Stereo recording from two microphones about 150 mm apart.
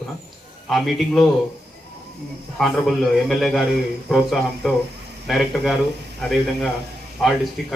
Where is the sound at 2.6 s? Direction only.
Centre (ahead or behind).